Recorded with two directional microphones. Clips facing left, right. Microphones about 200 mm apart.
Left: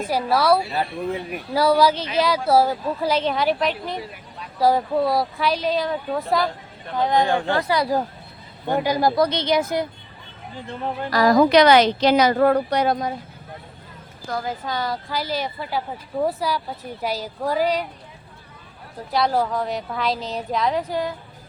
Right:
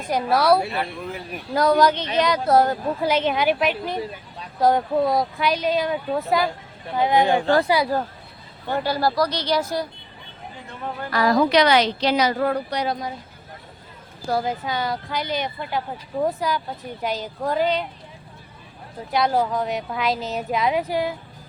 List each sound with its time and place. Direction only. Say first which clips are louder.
0.1 s a woman's voice: right 1 dB; centre (ahead or behind)
8.6 s speech: left 2 dB; 15° left (ahead or behind)
10.7 s a woman's voice: left 4 dB; 35° left (ahead or behind); by 13.1 s 55° left (ahead or behind)
14.3 s a woman's voice: right 4 dB; 30° right (ahead or behind)
14.6 s a woman's voice: even; centre (ahead or behind)
19.1 s a woman's voice: even; centre (ahead or behind)